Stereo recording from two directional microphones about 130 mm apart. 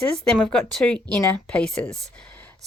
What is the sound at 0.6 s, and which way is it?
Speech, 60° right (ahead or behind).